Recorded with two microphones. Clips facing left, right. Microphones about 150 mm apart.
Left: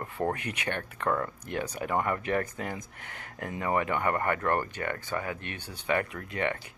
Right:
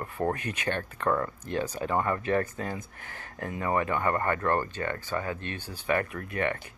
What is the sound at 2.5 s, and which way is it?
Speech, 15° left (ahead or behind).